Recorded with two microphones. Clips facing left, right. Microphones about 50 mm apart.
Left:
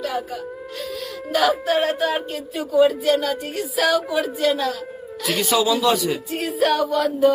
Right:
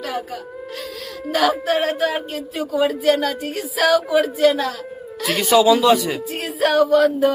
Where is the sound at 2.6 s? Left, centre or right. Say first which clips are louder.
Left 3 dB; right.